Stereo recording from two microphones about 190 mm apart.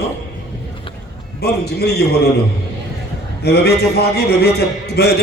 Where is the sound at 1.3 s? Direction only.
60° left (ahead or behind).